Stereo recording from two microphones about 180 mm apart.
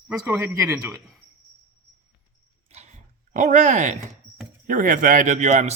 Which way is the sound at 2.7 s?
40° right (ahead or behind).